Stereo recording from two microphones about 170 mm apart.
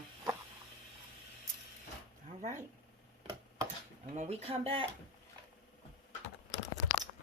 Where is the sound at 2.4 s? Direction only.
45° right (ahead or behind).